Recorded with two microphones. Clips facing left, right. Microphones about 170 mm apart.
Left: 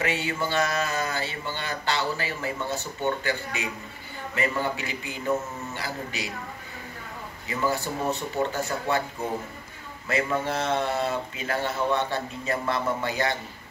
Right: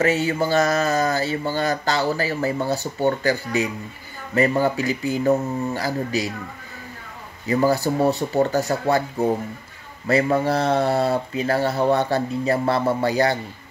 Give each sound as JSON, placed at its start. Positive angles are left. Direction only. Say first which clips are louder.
{"t": 0.0, "sound": "speech", "louder": "right 8 dB", "side_deg": -40}
{"t": 7.4, "sound": "speech", "louder": "right 9 dB", "side_deg": -40}